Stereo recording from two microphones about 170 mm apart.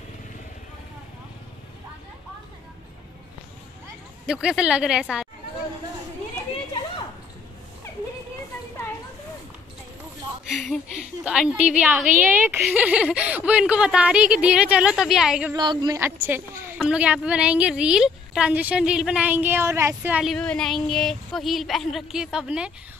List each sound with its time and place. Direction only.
4.3 s a woman's voice: 5° right (ahead or behind)
10.5 s a woman's voice: centre (ahead or behind)
15.5 s a woman's voice: 25° right (ahead or behind)
16.0 s a woman's voice: 15° right (ahead or behind)